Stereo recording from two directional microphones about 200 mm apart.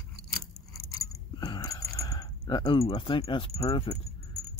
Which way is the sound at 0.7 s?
15° left (ahead or behind).